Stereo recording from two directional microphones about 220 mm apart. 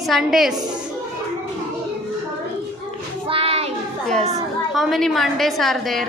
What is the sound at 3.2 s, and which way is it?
Child singing, 25° right (ahead or behind).